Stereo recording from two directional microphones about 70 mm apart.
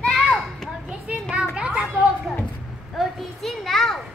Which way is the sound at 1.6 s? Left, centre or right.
Centre.